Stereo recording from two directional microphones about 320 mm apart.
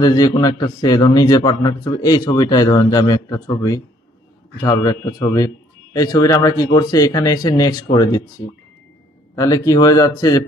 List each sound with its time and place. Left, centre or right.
0.0 s a man's voice: centre
9.3 s a man's voice: centre